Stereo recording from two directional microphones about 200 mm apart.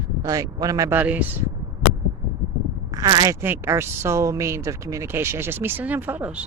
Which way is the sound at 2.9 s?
20° right (ahead or behind).